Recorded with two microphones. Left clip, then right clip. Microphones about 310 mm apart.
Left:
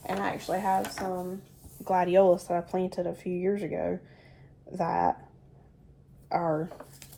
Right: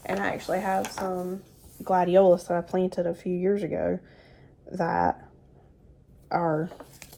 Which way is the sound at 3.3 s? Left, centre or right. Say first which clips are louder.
Right 2 dB; right.